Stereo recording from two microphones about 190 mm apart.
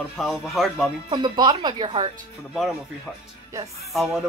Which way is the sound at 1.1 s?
25° right (ahead or behind).